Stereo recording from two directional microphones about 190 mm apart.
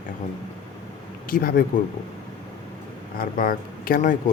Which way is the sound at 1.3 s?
50° left (ahead or behind).